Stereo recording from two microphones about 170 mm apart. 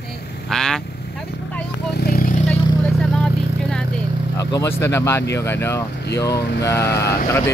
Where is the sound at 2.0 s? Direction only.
60° left (ahead or behind).